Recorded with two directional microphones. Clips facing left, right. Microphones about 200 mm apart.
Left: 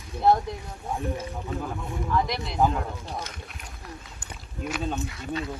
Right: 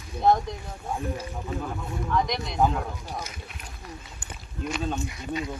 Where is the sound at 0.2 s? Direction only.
Centre (ahead or behind).